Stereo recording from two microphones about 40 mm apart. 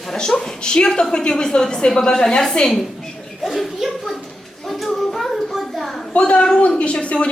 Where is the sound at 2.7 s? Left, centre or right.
Centre.